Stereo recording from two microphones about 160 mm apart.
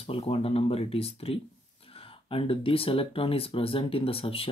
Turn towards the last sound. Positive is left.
turn(degrees=35)  # may be behind; listen again after turning